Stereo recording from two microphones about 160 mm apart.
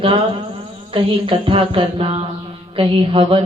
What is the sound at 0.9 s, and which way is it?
A woman's voice, 35° right (ahead or behind).